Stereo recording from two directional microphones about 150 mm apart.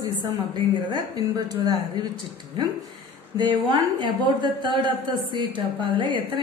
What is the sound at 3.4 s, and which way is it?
A woman's voice, 30° right (ahead or behind).